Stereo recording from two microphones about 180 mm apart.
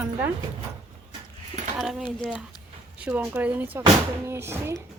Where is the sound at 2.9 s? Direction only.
5° right (ahead or behind).